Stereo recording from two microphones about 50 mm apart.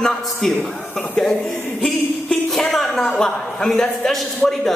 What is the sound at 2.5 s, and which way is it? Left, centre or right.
A man's voice, centre.